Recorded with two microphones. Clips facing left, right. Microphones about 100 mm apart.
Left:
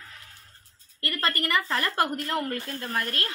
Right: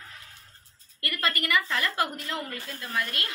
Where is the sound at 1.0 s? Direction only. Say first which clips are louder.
Left 1 dB; 35° left (ahead or behind).